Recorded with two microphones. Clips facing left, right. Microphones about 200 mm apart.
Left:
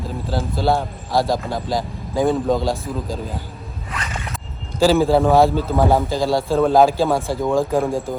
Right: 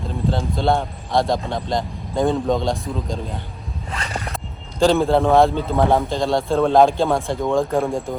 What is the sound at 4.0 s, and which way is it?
Zipper, 30° right (ahead or behind).